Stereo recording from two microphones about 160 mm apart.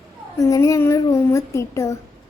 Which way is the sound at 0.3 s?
20° left (ahead or behind).